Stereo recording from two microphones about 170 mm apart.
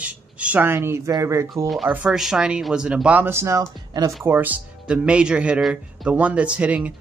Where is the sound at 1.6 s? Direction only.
Centre (ahead or behind).